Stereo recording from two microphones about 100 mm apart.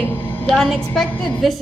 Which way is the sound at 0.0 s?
20° left (ahead or behind).